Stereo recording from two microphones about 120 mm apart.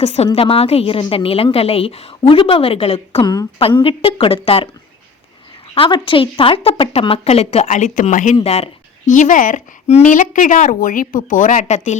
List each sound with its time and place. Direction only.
0.0 s a woman's voice: 60° left (ahead or behind)
5.7 s speech: 45° left (ahead or behind); by 8.4 s 90° left
8.4 s a woman's voice: 60° left (ahead or behind); by 11.9 s 85° left